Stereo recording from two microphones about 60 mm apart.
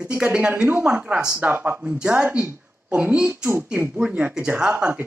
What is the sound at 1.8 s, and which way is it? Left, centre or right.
Speech, centre.